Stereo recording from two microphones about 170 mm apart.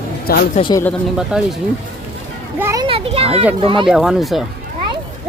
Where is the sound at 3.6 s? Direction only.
30° right (ahead or behind).